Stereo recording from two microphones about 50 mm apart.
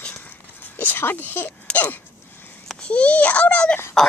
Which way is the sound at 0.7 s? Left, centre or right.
Left.